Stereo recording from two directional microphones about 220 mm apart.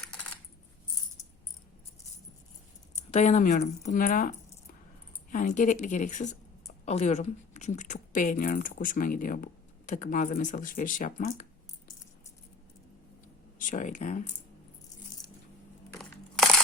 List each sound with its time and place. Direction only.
3.1 s speech: 30° left (ahead or behind)
13.6 s speech: 35° left (ahead or behind)
16.0 s crushing: centre (ahead or behind)